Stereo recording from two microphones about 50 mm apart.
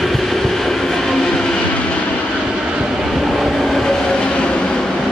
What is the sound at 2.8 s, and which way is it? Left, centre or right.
Train, centre.